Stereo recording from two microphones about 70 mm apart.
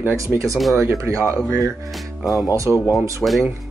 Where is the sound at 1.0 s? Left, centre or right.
Right.